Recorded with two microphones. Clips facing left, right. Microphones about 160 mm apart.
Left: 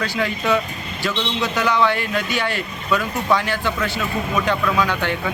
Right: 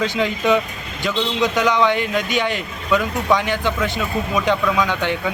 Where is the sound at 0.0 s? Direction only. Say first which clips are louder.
Right 3 dB; 20° right (ahead or behind).